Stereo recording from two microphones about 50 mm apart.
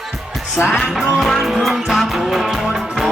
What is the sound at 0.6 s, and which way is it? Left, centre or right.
Music, left.